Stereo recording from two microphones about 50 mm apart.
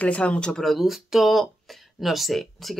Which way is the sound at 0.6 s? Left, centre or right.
Centre.